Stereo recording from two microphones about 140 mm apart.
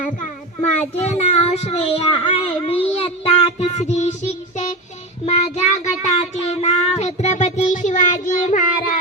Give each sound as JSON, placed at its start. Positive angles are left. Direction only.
{"t": 0.8, "sound": "a child's voice", "side_deg": 50}
{"t": 2.9, "sound": "child singing", "side_deg": 45}